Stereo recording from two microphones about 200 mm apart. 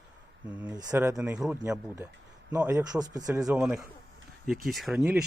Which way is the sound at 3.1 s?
15° right (ahead or behind).